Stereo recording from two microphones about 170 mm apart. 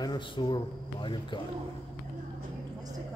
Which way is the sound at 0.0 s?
25° left (ahead or behind).